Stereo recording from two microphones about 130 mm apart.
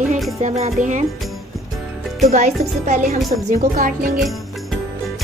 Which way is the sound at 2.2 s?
65° right (ahead or behind).